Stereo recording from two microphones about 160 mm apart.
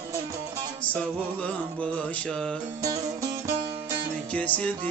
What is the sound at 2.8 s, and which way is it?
Music, 20° right (ahead or behind).